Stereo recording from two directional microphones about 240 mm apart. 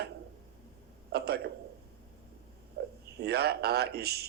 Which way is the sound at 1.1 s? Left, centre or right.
Right.